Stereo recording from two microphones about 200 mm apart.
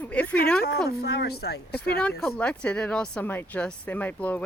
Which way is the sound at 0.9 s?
55° left (ahead or behind).